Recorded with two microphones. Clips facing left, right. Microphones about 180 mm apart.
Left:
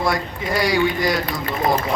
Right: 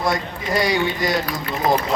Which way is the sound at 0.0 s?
20° right (ahead or behind).